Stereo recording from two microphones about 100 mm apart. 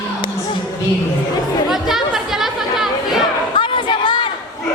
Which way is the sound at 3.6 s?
55° left (ahead or behind).